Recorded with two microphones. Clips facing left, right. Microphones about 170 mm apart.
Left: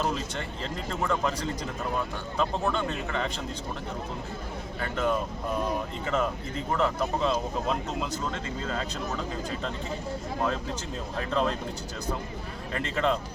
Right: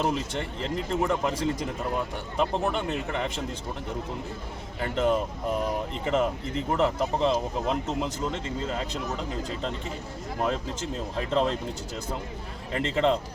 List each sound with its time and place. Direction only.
0.0 s speech: 20° right (ahead or behind)
4.8 s speech: 25° right (ahead or behind)
11.2 s speech: 20° right (ahead or behind)
12.7 s speech: 20° right (ahead or behind)